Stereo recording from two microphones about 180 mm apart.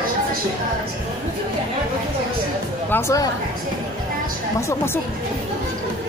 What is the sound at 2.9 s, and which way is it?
Speech, 20° left (ahead or behind).